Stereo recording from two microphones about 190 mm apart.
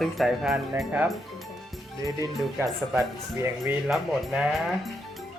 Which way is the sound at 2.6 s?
15° right (ahead or behind).